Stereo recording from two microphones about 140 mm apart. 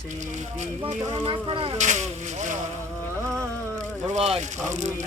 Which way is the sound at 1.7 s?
60° right (ahead or behind).